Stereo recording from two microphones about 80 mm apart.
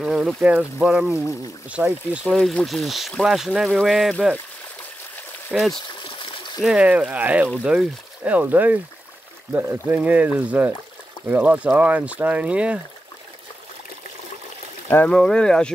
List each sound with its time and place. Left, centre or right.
0.0 s speech: centre
2.2 s speech: centre
5.5 s speech: centre
6.0 s a sound: left
6.6 s speech: centre
9.8 s speech: centre
15.0 s speech: centre